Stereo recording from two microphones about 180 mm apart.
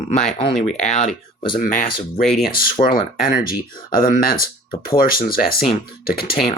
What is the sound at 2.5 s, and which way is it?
Speech, 55° left (ahead or behind).